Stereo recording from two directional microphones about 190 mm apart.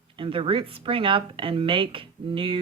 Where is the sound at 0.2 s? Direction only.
30° right (ahead or behind).